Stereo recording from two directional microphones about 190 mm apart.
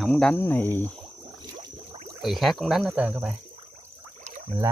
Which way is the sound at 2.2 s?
Centre (ahead or behind).